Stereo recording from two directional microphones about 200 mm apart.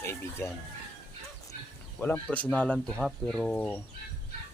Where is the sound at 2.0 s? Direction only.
10° left (ahead or behind).